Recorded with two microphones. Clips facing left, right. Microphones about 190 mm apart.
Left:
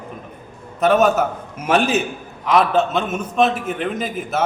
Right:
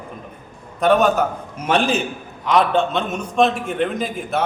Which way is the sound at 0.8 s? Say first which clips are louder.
Left 1 dB; 5° left (ahead or behind).